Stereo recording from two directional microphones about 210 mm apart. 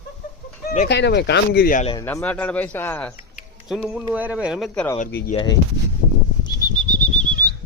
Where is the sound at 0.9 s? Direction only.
55° left (ahead or behind).